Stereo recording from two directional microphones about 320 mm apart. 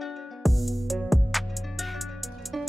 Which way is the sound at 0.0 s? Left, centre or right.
Centre.